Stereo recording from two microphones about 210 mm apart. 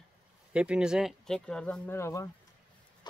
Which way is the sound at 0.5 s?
5° right (ahead or behind).